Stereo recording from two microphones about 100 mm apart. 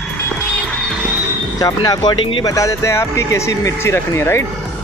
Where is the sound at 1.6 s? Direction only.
40° left (ahead or behind).